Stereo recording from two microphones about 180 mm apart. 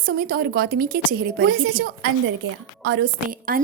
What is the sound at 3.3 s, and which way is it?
Speech, 50° right (ahead or behind).